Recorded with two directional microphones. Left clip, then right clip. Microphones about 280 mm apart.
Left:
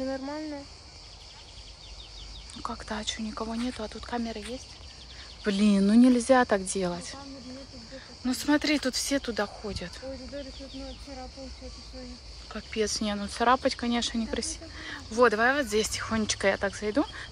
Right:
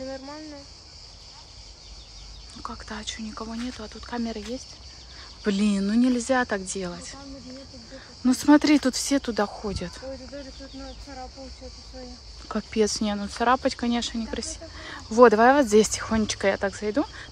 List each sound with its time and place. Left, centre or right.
2.6 s speech: centre
8.3 s speech: right
12.4 s speech: centre